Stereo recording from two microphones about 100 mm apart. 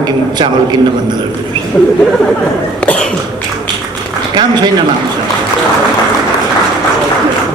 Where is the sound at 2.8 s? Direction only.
10° left (ahead or behind).